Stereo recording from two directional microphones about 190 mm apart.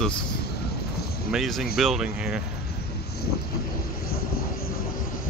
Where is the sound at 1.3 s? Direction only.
Centre (ahead or behind).